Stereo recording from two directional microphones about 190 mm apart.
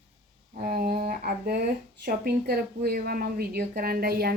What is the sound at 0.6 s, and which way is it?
Speech, 50° right (ahead or behind).